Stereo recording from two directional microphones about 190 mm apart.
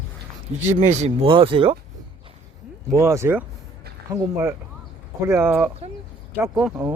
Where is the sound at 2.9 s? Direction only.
15° right (ahead or behind).